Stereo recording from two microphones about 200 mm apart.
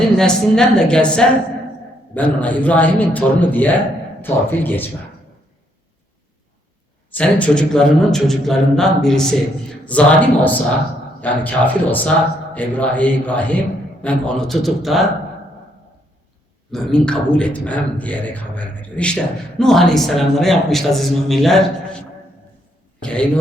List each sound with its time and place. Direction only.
0.2 s a man's voice: 5° left (ahead or behind)
7.1 s a man's voice: 5° left (ahead or behind)
16.7 s speech: 5° left (ahead or behind)
23.0 s a sound: 5° left (ahead or behind)